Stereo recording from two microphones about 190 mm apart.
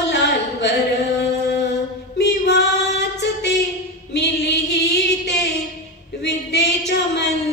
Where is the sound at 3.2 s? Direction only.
65° left (ahead or behind).